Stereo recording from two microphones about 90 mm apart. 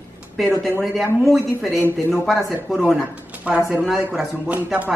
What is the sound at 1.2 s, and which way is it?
Speech, centre (ahead or behind).